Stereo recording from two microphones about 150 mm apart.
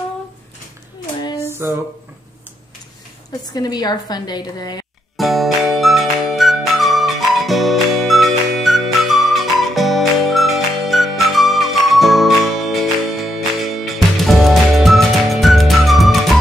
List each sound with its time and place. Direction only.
1.5 s a sound: 15° right (ahead or behind)
3.3 s a woman's voice: 25° left (ahead or behind)
5.1 s music: centre (ahead or behind)